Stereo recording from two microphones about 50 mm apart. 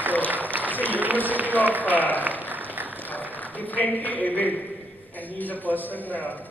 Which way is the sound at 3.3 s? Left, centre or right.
Left.